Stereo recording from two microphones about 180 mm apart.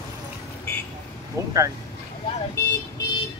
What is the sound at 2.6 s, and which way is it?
Vehicle, 15° left (ahead or behind).